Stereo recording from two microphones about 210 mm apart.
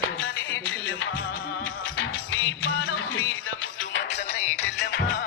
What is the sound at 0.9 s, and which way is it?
Music, 60° left (ahead or behind).